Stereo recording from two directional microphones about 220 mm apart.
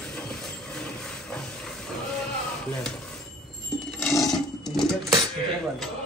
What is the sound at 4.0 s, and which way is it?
Coin, 15° left (ahead or behind).